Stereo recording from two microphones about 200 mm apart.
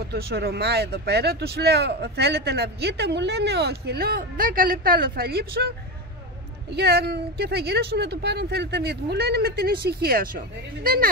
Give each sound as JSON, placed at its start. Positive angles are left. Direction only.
{"t": 0.1, "sound": "speech", "side_deg": -55}
{"t": 6.7, "sound": "speech", "side_deg": -55}